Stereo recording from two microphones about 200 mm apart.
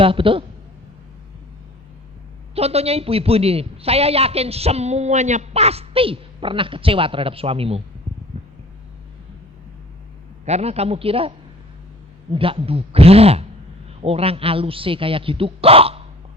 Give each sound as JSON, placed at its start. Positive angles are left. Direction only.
{"t": 0.0, "sound": "a man's voice", "side_deg": -25}
{"t": 2.6, "sound": "a man's voice", "side_deg": -30}
{"t": 8.3, "sound": "a sound", "side_deg": -30}
{"t": 10.4, "sound": "a man's voice", "side_deg": -30}